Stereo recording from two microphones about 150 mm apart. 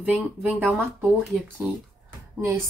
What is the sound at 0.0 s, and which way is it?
Speech, 10° right (ahead or behind).